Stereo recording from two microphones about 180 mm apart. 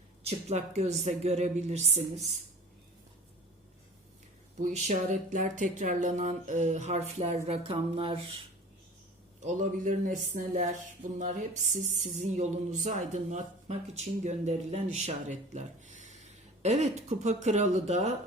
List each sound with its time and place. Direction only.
0.2 s speech: 35° right (ahead or behind)
4.6 s speech: 40° right (ahead or behind)
9.4 s speech: 40° right (ahead or behind)